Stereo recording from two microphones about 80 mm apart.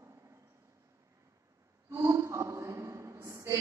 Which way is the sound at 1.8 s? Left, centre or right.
Right.